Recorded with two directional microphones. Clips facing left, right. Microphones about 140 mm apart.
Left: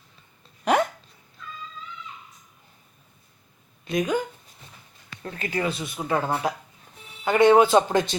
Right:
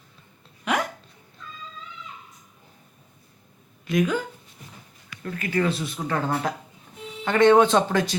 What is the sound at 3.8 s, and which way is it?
Speech, 25° left (ahead or behind).